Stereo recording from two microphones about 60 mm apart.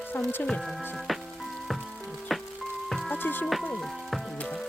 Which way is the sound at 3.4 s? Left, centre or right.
Centre.